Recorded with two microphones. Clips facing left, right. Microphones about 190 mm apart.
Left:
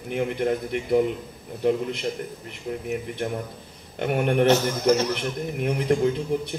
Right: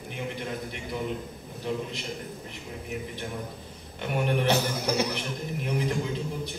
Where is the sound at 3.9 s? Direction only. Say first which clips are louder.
Left 5 dB; 60° left (ahead or behind).